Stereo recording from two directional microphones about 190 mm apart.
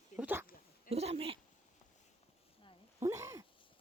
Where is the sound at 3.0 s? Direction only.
15° right (ahead or behind).